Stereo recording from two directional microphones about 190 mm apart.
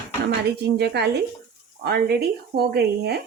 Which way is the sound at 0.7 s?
60° right (ahead or behind).